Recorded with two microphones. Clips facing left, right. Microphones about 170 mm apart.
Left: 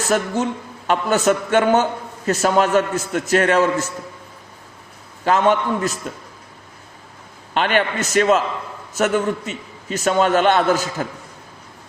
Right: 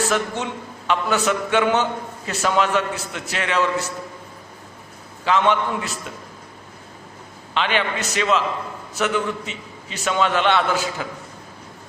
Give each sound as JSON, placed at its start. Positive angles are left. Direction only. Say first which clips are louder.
{"t": 0.0, "sound": "a man's voice", "louder": "left 3 dB", "side_deg": 45}
{"t": 5.2, "sound": "a man's voice", "louder": "left 2 dB", "side_deg": 45}
{"t": 7.5, "sound": "a man's voice", "louder": "left 3 dB", "side_deg": 50}